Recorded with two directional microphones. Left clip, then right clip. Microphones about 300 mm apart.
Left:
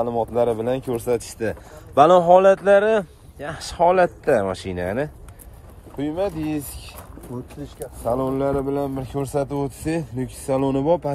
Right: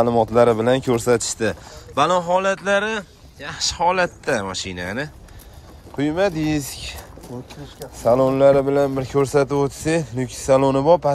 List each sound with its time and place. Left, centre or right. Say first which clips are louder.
0.3 s speech: right 5 dB; centre
2.0 s a man's voice: left 5 dB; centre
5.9 s speech: right 5 dB; centre
8.0 s speech: right 7 dB; right
8.3 s speech: right 8 dB; right